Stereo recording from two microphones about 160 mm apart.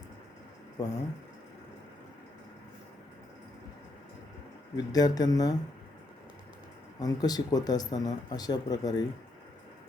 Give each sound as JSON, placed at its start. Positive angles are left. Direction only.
{"t": 0.8, "sound": "speech", "side_deg": 25}
{"t": 4.9, "sound": "speech", "side_deg": 25}
{"t": 7.0, "sound": "speech", "side_deg": 25}